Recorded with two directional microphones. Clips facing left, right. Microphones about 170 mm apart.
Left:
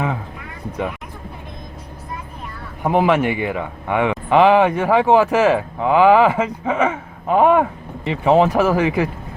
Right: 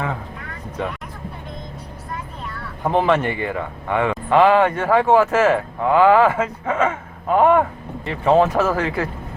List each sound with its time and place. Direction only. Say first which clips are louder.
2.8 s a man's voice: left 2 dB; 10° left (ahead or behind)